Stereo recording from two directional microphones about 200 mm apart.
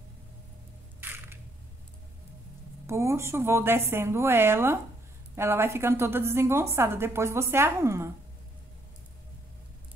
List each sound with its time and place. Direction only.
1.0 s single-lens reflex camera: 10° right (ahead or behind)
2.9 s a woman's voice: 15° right (ahead or behind)